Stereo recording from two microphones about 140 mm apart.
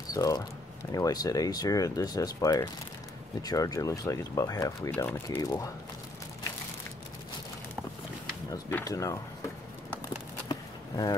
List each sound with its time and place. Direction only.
0.1 s speech: 25° left (ahead or behind)
4.9 s speech: 10° left (ahead or behind)
8.8 s speech: 25° left (ahead or behind)
10.0 s a sound: 25° left (ahead or behind)